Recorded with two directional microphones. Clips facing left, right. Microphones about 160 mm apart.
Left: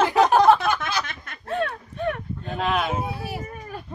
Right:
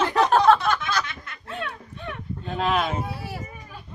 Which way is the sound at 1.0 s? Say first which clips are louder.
Left 2 dB; 45° left (ahead or behind).